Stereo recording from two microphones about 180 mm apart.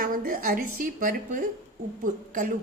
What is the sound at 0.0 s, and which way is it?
A woman's voice, 50° right (ahead or behind).